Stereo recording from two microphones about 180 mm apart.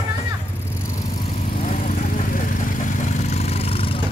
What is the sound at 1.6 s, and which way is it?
Vehicle, 45° left (ahead or behind).